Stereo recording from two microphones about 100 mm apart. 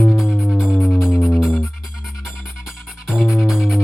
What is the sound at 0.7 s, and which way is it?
Music, 5° left (ahead or behind).